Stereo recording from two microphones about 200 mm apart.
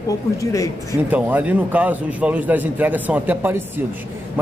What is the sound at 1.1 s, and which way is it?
A man's voice, 10° right (ahead or behind).